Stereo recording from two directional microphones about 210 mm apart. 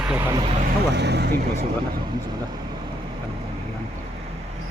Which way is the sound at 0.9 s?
55° right (ahead or behind).